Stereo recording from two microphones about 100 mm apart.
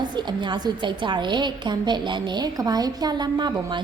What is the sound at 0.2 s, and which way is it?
A woman's voice, 45° right (ahead or behind).